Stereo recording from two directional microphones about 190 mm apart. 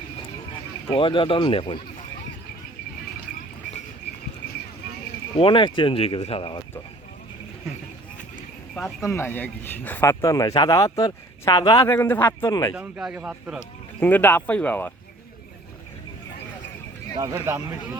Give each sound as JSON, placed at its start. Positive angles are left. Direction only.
{"t": 0.9, "sound": "speech", "side_deg": 25}
{"t": 5.4, "sound": "speech", "side_deg": 25}
{"t": 8.7, "sound": "speech", "side_deg": 5}
{"t": 12.7, "sound": "speech", "side_deg": -5}
{"t": 14.0, "sound": "speech", "side_deg": 10}
{"t": 17.2, "sound": "speech", "side_deg": -15}